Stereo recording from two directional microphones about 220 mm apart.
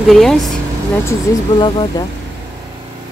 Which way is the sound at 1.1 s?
20° left (ahead or behind).